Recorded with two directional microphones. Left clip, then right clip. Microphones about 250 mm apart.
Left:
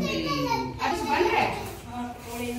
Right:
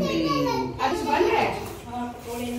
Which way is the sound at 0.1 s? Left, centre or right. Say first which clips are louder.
Right 3 dB; left.